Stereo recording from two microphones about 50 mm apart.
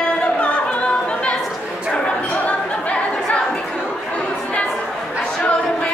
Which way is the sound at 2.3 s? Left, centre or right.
Left.